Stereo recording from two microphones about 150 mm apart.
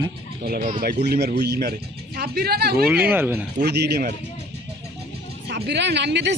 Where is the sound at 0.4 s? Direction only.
80° right.